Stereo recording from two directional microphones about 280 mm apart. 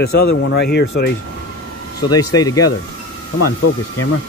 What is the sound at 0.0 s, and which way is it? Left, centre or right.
Speech, left.